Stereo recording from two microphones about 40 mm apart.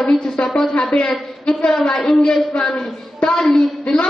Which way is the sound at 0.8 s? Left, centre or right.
Left.